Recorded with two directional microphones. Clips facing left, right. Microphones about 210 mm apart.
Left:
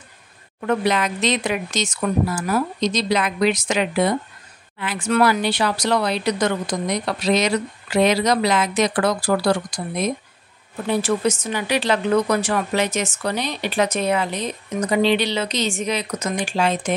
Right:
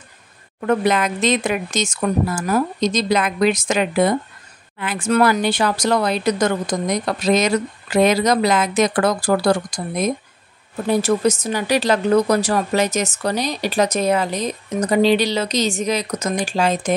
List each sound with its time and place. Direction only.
0.6 s speech: 45° right (ahead or behind)